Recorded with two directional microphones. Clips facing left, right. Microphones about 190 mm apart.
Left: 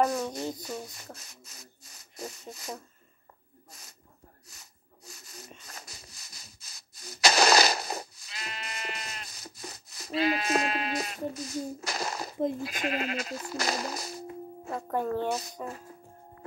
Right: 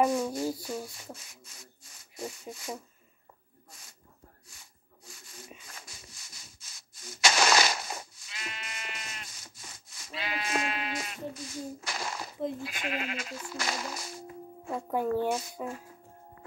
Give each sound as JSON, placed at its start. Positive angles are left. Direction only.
{"t": 0.1, "sound": "speech", "side_deg": 40}
{"t": 0.8, "sound": "rub", "side_deg": 40}
{"t": 2.5, "sound": "speech", "side_deg": 40}
{"t": 4.5, "sound": "a sound", "side_deg": 40}
{"t": 14.7, "sound": "speech", "side_deg": -10}